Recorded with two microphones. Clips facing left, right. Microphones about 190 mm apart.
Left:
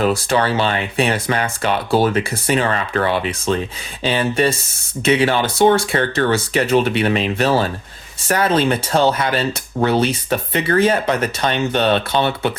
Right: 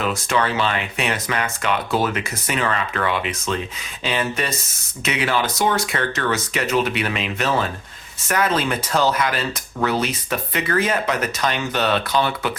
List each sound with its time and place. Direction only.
0.0 s speech: 35° left (ahead or behind)